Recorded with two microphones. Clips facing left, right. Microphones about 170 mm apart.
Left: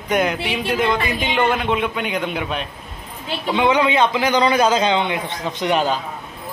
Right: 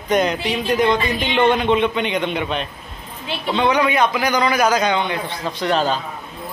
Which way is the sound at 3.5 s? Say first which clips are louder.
Left 1 dB; 20° left (ahead or behind).